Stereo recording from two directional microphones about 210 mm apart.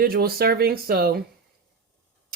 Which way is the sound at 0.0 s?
45° right (ahead or behind).